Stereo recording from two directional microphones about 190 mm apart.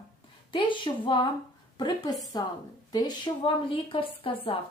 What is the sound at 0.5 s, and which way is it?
A woman's voice, 25° left (ahead or behind).